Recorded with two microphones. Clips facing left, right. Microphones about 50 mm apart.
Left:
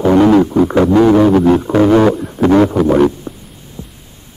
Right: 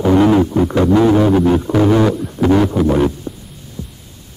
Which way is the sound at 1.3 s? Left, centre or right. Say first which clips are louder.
Left 3 dB; left.